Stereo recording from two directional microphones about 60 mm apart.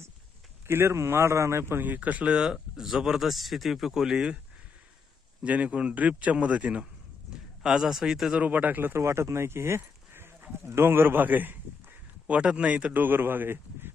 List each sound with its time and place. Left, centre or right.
0.7 s speech: right
2.0 s speech: right
5.4 s a man's voice: right
7.6 s speech: centre
8.4 s a man's voice: right
8.9 s speech: right
12.4 s speech: centre
12.9 s speech: right